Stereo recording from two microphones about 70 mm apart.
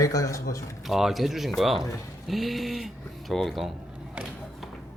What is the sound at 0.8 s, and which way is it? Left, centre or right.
Speech, centre.